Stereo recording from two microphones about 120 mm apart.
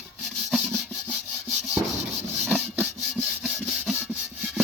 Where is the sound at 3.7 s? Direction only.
Centre (ahead or behind).